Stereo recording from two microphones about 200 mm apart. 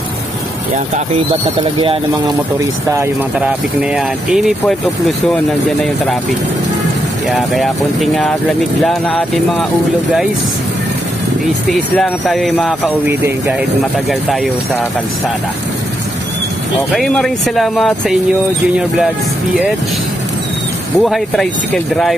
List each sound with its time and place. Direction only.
1.6 s speech: 25° right (ahead or behind)
3.9 s speech: centre (ahead or behind)
7.2 s speech: centre (ahead or behind)
11.7 s speech: centre (ahead or behind)
13.1 s speech: 10° right (ahead or behind)
14.3 s speech: centre (ahead or behind)
16.9 s speech: centre (ahead or behind)
21.0 s speech: centre (ahead or behind)